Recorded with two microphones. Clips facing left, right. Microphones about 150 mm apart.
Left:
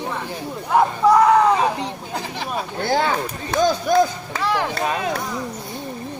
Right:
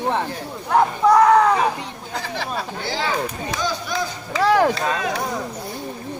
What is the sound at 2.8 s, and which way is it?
Speech, 50° left (ahead or behind).